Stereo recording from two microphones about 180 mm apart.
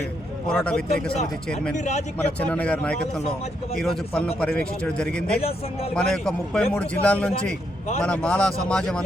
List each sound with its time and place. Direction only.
0.4 s a man's voice: 5° left (ahead or behind)
1.7 s speech: 40° left (ahead or behind)
2.1 s a man's voice: 10° left (ahead or behind)
5.4 s speech: 35° left (ahead or behind)
5.9 s a man's voice: 5° left (ahead or behind)